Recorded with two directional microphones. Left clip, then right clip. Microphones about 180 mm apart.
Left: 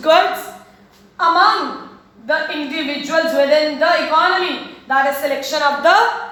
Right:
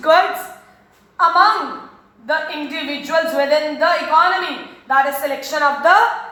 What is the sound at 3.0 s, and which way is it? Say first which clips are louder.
Speech: left 2 dB; 5° left (ahead or behind).